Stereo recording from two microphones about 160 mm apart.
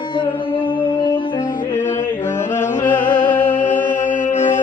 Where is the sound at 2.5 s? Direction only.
50° left (ahead or behind).